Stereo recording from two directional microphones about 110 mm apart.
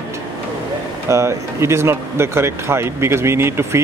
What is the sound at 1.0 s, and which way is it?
Speech, 25° right (ahead or behind).